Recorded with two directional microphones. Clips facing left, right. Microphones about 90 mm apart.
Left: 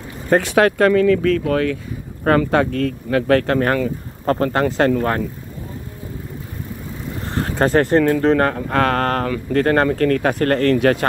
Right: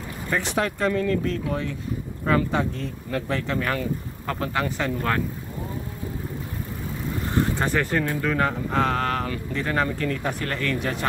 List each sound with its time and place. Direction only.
0.3 s speech: 70° left (ahead or behind)
2.2 s speech: 65° left (ahead or behind); by 4.6 s 50° left (ahead or behind)
4.6 s speech: 75° left (ahead or behind)
7.5 s speech: 40° left (ahead or behind)
7.8 s speech: 60° left (ahead or behind)
10.8 s speech: 70° left (ahead or behind)